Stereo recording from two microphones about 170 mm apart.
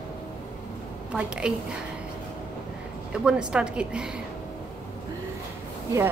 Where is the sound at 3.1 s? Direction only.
5° right (ahead or behind).